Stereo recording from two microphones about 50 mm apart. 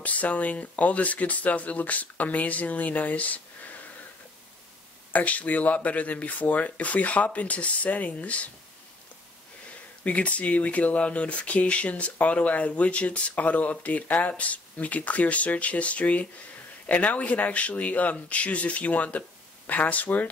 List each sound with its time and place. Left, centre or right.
0.0 s speech: left
5.1 s speech: left
10.0 s speech: left